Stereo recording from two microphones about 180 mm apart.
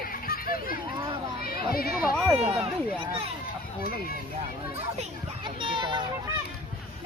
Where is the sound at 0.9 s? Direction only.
25° right (ahead or behind).